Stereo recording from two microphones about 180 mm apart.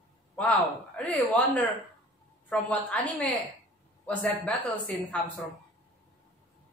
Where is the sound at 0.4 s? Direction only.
5° left (ahead or behind).